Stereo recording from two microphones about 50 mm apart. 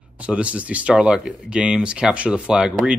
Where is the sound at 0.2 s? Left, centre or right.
Right.